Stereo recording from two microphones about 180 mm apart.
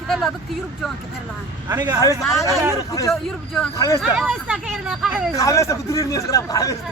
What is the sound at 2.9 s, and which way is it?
Speech, 20° left (ahead or behind).